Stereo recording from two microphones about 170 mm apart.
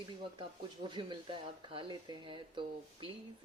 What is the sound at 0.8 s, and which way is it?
Speech, 30° right (ahead or behind).